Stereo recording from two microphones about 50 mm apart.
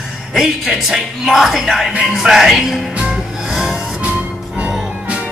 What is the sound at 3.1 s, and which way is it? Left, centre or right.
Music, centre.